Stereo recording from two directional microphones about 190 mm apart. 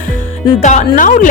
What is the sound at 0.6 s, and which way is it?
Speech, 40° left (ahead or behind).